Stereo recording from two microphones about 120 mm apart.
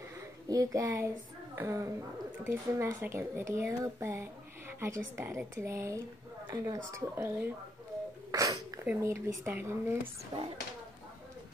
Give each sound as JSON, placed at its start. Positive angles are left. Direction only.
{"t": 0.5, "sound": "speech", "side_deg": -30}
{"t": 8.3, "sound": "a sound", "side_deg": -30}
{"t": 8.8, "sound": "speech", "side_deg": -20}
{"t": 10.3, "sound": "a child's voice", "side_deg": -35}